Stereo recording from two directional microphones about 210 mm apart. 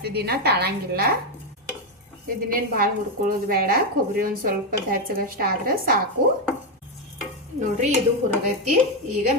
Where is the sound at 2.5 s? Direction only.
45° right (ahead or behind).